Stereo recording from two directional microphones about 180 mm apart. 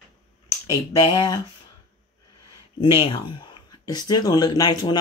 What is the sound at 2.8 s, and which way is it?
Speech, 30° left (ahead or behind).